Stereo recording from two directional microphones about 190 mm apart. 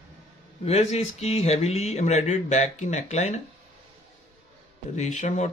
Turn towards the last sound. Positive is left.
turn(degrees=40)  # may be behind; listen again after turning